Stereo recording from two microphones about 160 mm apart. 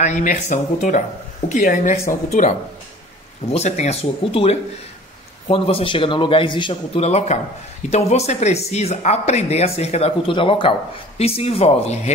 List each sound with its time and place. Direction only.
0.0 s speech: 50° left (ahead or behind)
3.5 s speech: 45° left (ahead or behind)